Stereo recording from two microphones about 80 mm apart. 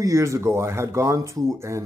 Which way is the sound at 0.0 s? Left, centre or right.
Right.